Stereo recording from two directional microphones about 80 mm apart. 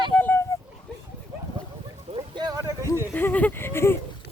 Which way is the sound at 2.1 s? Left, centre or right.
Right.